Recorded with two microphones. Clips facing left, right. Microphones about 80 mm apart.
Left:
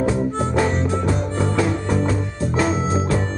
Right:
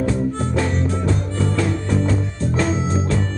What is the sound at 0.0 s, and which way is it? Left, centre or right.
Music, centre.